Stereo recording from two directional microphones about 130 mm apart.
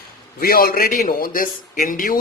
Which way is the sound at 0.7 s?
90° left.